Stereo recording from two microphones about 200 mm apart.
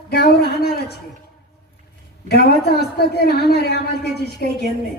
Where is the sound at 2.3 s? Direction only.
55° left (ahead or behind).